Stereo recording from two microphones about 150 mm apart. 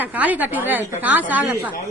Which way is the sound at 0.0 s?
10° right (ahead or behind).